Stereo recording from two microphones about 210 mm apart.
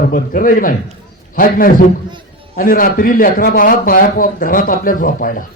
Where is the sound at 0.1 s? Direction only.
40° left (ahead or behind).